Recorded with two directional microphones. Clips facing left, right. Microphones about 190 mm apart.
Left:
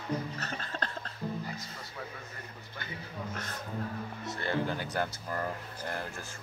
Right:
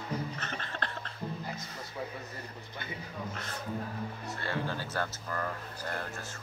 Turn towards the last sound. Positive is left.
turn(degrees=15)  # may be behind; listen again after turning